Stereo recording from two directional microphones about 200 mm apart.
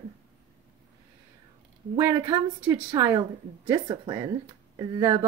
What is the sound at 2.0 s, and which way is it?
A woman's voice, 15° right (ahead or behind).